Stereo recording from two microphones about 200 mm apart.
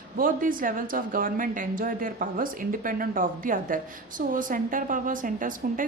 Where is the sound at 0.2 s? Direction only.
45° right (ahead or behind).